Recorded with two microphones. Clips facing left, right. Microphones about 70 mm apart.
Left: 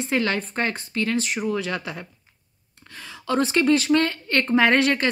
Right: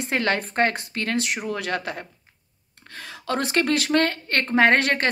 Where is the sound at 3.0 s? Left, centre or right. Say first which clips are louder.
Left 3 dB; right.